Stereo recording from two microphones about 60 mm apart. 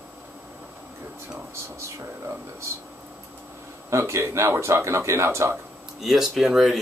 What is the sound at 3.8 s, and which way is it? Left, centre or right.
Speech, right.